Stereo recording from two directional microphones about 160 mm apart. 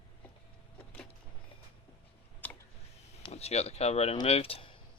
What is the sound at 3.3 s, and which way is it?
Speech, 40° left (ahead or behind).